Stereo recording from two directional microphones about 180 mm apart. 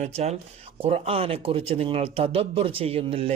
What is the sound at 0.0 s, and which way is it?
Speech, 35° right (ahead or behind).